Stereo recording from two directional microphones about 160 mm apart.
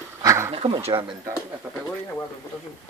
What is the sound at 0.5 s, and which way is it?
Speech, 35° right (ahead or behind).